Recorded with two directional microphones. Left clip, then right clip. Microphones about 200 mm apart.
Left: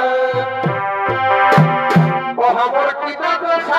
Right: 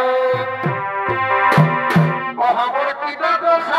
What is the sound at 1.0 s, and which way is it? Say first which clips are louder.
Music: left 2 dB; 50° left (ahead or behind).